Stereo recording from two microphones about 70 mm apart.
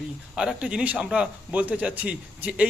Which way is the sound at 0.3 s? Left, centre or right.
Centre.